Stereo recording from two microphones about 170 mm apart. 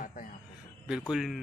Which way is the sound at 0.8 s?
5° right (ahead or behind).